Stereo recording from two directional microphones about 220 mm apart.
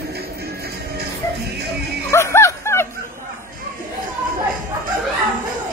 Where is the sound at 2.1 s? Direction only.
10° left (ahead or behind).